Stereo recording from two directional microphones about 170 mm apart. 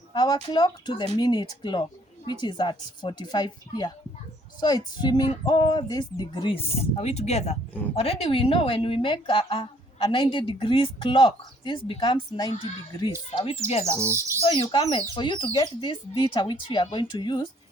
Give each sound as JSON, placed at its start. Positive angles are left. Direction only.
{"t": 0.1, "sound": "a woman's voice", "side_deg": 25}
{"t": 14.0, "sound": "speech", "side_deg": -15}
{"t": 14.4, "sound": "a woman's voice", "side_deg": 30}